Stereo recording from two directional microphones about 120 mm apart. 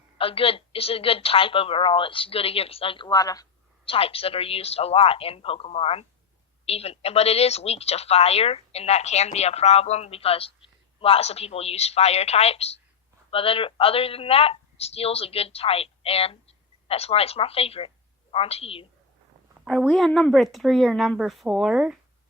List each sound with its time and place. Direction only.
0.2 s a woman's voice: 50° left (ahead or behind)
3.1 s speech: 30° left (ahead or behind)
3.8 s a woman's voice: 50° left (ahead or behind)
19.6 s speech: centre (ahead or behind)